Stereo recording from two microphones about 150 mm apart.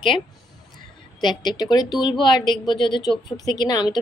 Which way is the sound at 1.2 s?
30° left (ahead or behind).